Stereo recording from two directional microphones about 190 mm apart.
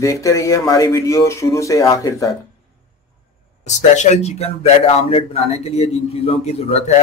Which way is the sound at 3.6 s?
40° left (ahead or behind).